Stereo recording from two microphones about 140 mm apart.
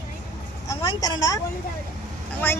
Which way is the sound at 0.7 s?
25° left (ahead or behind).